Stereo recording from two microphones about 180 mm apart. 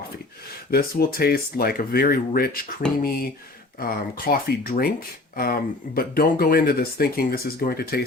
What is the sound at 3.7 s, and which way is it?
Speech, 55° left (ahead or behind).